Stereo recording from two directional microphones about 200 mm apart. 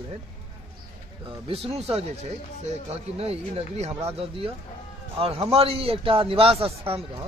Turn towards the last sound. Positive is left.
turn(degrees=-30)  # may be behind; listen again after turning